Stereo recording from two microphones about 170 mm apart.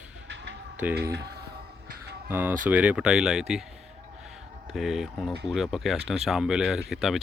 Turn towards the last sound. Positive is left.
turn(degrees=0)  # may be behind; listen again after turning